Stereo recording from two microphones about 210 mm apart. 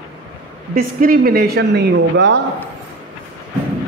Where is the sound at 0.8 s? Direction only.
45° right (ahead or behind).